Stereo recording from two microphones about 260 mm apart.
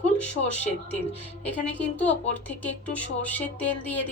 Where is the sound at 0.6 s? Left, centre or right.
Left.